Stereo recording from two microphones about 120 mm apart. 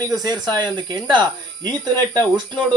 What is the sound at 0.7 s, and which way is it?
Speech, 40° right (ahead or behind).